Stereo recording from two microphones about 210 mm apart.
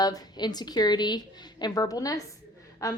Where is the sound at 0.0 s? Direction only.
20° left (ahead or behind).